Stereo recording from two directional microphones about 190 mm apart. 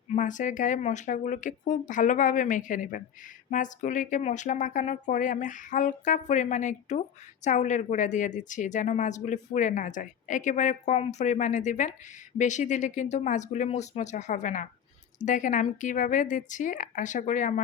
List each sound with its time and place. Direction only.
0.1 s a woman's voice: 40° left (ahead or behind)